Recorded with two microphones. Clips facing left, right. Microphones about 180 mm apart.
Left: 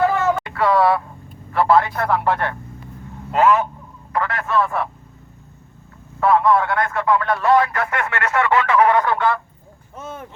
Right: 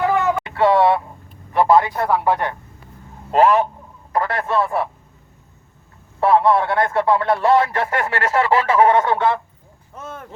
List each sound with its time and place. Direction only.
0.0 s a sound: 15° right (ahead or behind)
1.5 s speech: 15° right (ahead or behind)
3.3 s speech: 35° right (ahead or behind)
6.1 s speech: 30° right (ahead or behind)
9.9 s speech: 5° left (ahead or behind)